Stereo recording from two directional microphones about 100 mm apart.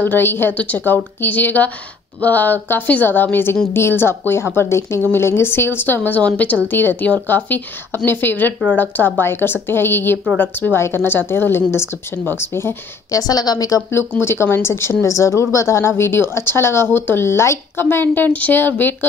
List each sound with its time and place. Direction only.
0.0 s a woman's voice: 20° left (ahead or behind)
13.1 s speech: 40° left (ahead or behind)
14.2 s a woman's voice: 25° left (ahead or behind)